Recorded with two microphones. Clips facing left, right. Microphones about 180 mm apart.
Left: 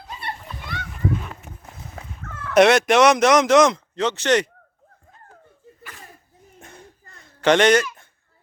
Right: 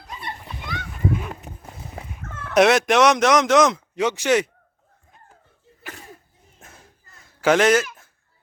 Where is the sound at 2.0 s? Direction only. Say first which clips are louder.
Right 1 dB; 20° right (ahead or behind).